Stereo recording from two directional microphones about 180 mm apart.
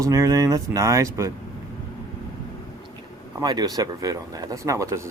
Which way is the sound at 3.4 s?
20° right (ahead or behind).